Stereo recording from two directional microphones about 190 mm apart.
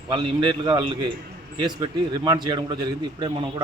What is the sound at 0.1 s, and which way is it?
A man's voice, 25° right (ahead or behind).